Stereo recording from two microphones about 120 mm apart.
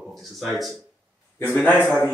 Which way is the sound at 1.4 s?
15° left (ahead or behind).